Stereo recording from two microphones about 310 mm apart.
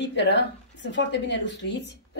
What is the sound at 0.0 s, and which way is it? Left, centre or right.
A woman's voice, left.